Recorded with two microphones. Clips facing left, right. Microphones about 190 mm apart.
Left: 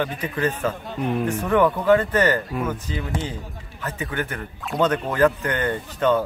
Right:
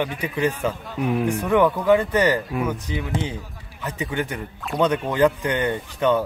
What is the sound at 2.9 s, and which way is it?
Speech, 15° right (ahead or behind).